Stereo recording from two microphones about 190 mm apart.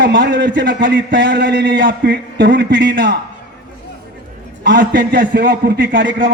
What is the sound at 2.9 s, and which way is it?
Speech, 55° right (ahead or behind).